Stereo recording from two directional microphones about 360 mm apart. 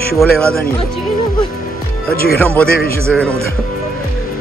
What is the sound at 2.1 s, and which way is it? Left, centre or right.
Speech, left.